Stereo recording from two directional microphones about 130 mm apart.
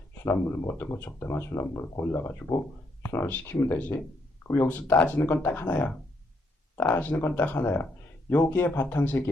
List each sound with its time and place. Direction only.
0.3 s speech: 20° left (ahead or behind)
6.9 s speech: 15° left (ahead or behind)